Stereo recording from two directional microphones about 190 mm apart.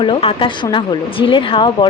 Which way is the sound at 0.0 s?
30° left (ahead or behind).